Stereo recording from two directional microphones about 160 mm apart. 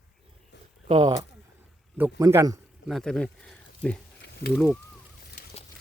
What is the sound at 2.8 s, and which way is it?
Speech, centre (ahead or behind).